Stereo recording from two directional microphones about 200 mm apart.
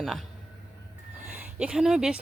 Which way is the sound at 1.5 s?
5° right (ahead or behind).